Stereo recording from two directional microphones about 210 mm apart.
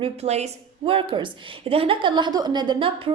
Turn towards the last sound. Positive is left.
turn(degrees=-25)  # may be behind; listen again after turning